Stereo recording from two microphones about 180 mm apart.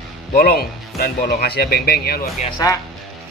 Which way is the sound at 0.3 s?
55° left (ahead or behind).